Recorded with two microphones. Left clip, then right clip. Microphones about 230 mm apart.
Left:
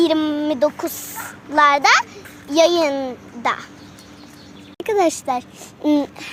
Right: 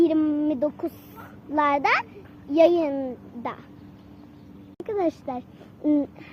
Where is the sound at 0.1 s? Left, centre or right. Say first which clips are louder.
Left 4 dB; centre.